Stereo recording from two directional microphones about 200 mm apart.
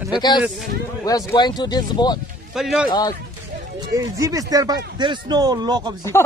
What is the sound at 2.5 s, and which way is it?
Speech, centre (ahead or behind).